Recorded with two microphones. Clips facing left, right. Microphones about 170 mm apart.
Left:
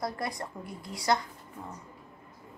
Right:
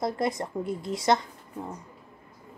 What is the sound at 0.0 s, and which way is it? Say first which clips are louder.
Speech: right 6 dB; 20° right (ahead or behind).